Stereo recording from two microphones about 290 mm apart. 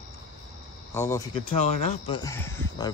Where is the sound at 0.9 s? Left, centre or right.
Centre.